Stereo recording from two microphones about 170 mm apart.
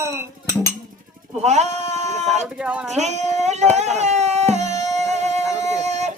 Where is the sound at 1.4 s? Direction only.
40° right (ahead or behind).